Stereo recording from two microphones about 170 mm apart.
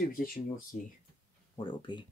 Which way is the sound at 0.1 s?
60° left (ahead or behind).